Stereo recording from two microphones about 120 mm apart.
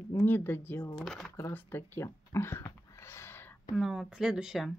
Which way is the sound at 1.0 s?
Centre (ahead or behind).